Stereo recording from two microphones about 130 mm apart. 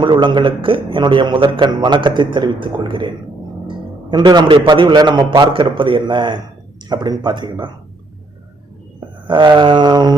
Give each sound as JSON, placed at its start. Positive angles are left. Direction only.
{"t": 0.0, "sound": "a man's voice", "side_deg": -40}
{"t": 9.2, "sound": "a man's voice", "side_deg": -35}